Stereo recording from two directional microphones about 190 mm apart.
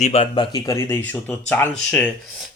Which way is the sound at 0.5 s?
15° left (ahead or behind).